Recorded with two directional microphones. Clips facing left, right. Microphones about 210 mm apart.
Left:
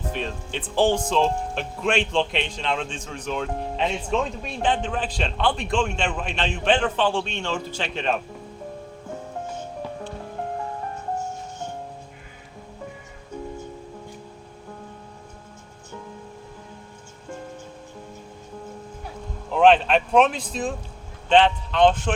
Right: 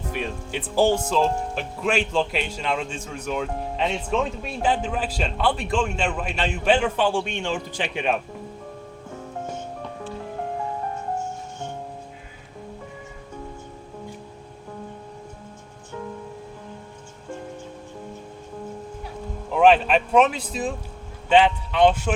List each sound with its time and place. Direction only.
0.1 s speech: 10° right (ahead or behind)
19.5 s speech: 5° right (ahead or behind)